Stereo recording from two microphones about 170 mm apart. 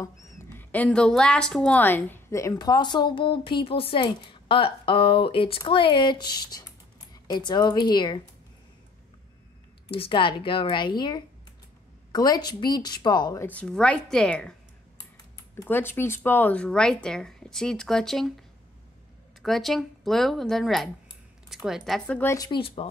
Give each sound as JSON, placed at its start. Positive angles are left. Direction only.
{"t": 0.0, "sound": "speech", "side_deg": 15}
{"t": 9.9, "sound": "speech", "side_deg": 30}
{"t": 13.5, "sound": "speech", "side_deg": 5}
{"t": 15.3, "sound": "speech", "side_deg": 15}
{"t": 19.4, "sound": "speech", "side_deg": 0}
{"t": 22.5, "sound": "speech", "side_deg": 35}